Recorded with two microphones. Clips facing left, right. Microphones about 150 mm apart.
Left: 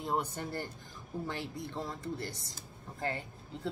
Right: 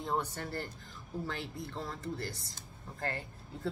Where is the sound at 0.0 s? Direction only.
10° left (ahead or behind).